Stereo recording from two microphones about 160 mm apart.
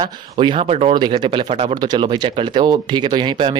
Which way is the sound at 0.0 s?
30° right (ahead or behind).